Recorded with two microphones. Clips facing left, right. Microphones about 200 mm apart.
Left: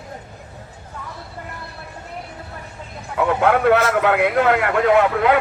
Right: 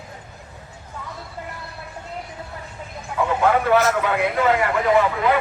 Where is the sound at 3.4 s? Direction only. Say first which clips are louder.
Left 2 dB; 65° left (ahead or behind).